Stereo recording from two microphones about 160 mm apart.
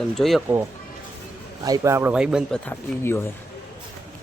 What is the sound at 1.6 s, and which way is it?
Speech, 20° right (ahead or behind).